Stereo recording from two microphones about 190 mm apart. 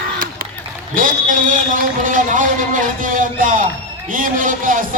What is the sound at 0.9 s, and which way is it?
A man's voice, 45° right (ahead or behind).